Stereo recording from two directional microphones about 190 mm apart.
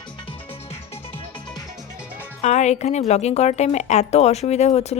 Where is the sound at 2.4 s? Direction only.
35° left (ahead or behind).